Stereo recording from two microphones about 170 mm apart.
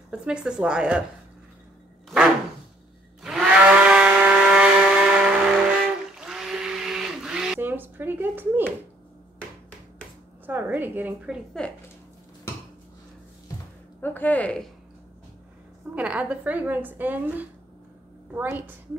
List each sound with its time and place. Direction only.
0.1 s speech: 5° right (ahead or behind)
3.2 s a sound: 5° right (ahead or behind)
6.1 s blender: 5° right (ahead or behind)
10.4 s a sound: 10° right (ahead or behind)
11.6 s speech: 5° left (ahead or behind)
14.0 s speech: 10° left (ahead or behind)
15.9 s a woman's voice: 5° right (ahead or behind)